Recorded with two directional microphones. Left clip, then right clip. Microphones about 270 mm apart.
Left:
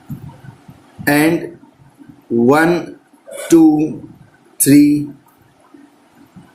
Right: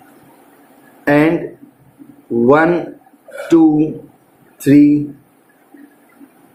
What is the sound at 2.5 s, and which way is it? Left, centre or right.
Speech, left.